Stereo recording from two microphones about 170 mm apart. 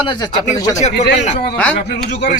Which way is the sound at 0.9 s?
75° left (ahead or behind).